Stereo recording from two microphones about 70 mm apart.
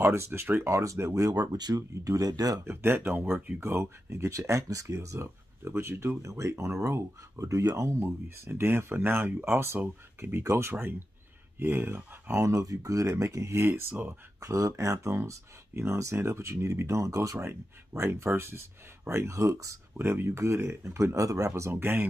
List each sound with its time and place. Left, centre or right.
0.0 s speech: right
2.6 s speech: right
3.6 s speech: right
8.0 s speech: right
10.4 s speech: right
14.4 s speech: right
20.0 s speech: right
21.5 s speech: right